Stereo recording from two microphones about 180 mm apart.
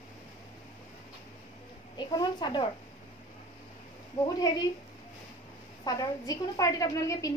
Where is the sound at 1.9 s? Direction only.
25° left (ahead or behind).